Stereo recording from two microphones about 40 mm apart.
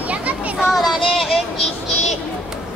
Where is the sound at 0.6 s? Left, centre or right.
Centre.